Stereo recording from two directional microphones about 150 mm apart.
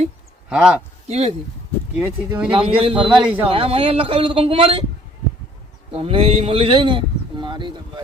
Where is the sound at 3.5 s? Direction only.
40° right (ahead or behind).